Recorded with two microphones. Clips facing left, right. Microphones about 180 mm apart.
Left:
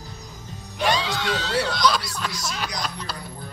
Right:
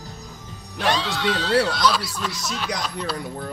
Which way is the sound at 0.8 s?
Centre (ahead or behind).